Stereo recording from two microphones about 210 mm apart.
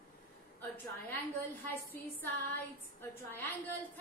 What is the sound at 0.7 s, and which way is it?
Speech, 10° left (ahead or behind).